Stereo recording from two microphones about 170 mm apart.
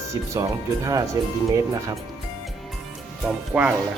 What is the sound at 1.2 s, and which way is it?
Music, 25° right (ahead or behind).